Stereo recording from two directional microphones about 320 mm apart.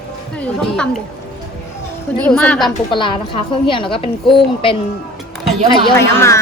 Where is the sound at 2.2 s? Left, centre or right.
Centre.